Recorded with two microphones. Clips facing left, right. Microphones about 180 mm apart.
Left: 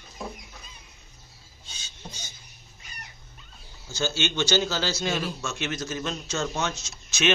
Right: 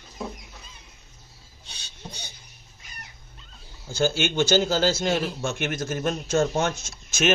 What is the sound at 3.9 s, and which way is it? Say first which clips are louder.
A man's voice: right 5 dB; 55° right (ahead or behind).